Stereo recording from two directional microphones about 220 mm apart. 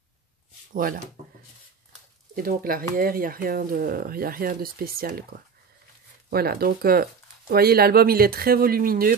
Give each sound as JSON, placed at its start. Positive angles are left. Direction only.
{"t": 0.7, "sound": "speech", "side_deg": -40}
{"t": 2.3, "sound": "speech", "side_deg": -40}